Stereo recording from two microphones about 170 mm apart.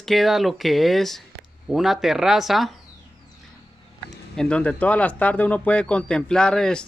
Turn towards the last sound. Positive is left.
turn(degrees=5)  # may be behind; listen again after turning